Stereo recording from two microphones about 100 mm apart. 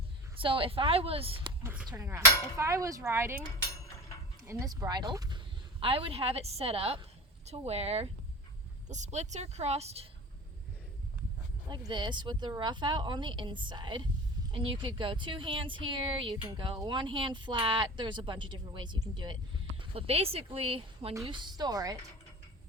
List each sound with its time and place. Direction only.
0.3 s a woman's voice: 60° right (ahead or behind)
2.0 s a sound: 30° right (ahead or behind)
4.4 s speech: 35° right (ahead or behind)
5.8 s speech: 65° right (ahead or behind)
7.4 s speech: 90° right
9.0 s speech: 90° right
11.7 s a woman's voice: 50° right (ahead or behind)
19.8 s speech: 75° right (ahead or behind)
21.2 s a woman's voice: 50° right (ahead or behind)